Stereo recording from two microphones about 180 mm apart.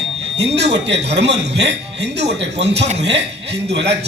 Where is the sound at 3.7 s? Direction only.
70° right (ahead or behind).